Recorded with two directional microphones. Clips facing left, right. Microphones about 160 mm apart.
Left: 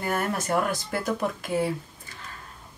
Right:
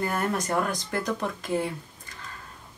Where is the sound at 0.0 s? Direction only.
5° left (ahead or behind).